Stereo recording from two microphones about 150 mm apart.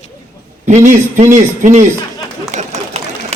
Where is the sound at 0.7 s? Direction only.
55° right (ahead or behind).